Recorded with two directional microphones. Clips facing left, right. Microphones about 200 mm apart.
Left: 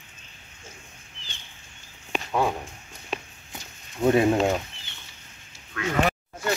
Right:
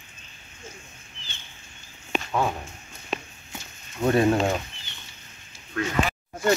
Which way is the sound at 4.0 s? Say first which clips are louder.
Left 1 dB; 10° left (ahead or behind).